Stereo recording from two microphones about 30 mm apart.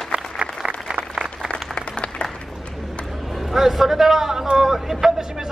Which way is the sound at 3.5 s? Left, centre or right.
Centre.